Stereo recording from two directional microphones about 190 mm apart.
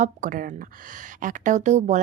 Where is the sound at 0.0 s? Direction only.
45° right (ahead or behind).